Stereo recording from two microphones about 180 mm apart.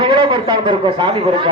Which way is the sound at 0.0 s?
25° right (ahead or behind).